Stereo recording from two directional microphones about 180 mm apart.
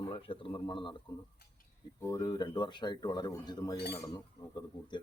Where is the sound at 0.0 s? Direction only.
30° left (ahead or behind).